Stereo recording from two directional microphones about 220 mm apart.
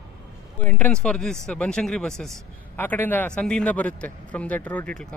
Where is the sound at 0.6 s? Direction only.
5° left (ahead or behind).